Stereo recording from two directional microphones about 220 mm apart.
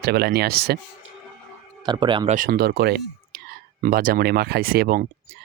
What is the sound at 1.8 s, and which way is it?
Speech, 20° right (ahead or behind).